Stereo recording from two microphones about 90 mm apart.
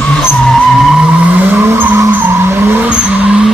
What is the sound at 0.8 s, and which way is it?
Vehicle, 10° right (ahead or behind).